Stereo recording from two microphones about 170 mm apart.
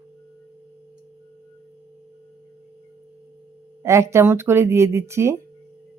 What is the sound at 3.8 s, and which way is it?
Speech, 15° right (ahead or behind).